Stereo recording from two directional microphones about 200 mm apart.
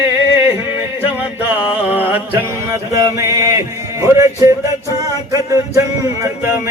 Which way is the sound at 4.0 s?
15° right (ahead or behind).